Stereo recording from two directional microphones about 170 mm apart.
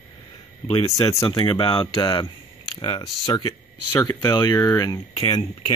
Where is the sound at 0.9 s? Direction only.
20° left (ahead or behind).